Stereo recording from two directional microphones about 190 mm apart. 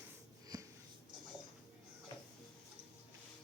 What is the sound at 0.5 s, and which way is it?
Wheeze, 20° right (ahead or behind).